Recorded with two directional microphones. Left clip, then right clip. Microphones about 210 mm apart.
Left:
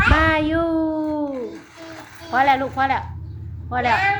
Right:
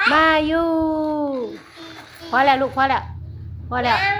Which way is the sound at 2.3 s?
25° right (ahead or behind).